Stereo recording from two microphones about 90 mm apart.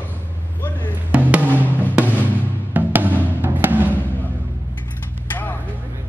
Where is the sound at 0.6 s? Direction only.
20° left (ahead or behind).